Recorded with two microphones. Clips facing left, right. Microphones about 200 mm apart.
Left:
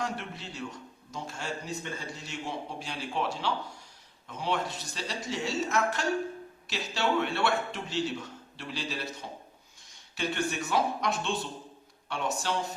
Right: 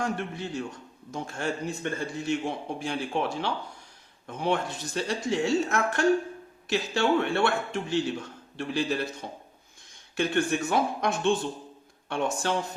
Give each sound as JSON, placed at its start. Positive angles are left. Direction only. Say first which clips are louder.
{"t": 0.0, "sound": "a man's voice", "louder": "right 5 dB", "side_deg": -50}
{"t": 10.2, "sound": "a man's voice", "louder": "right 6 dB", "side_deg": -55}